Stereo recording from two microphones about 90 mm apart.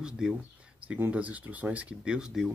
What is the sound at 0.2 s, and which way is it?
Speech, 10° right (ahead or behind).